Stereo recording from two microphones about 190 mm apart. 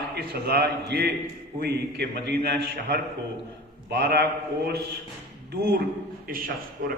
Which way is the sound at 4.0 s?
55° right (ahead or behind).